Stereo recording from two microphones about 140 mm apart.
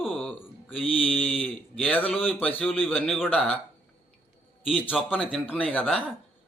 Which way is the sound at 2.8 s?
Centre (ahead or behind).